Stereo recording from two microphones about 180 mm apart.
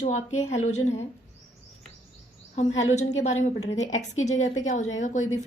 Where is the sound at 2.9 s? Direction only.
40° left (ahead or behind).